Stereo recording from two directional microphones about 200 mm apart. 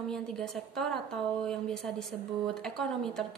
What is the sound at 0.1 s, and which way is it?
A woman's voice, centre (ahead or behind).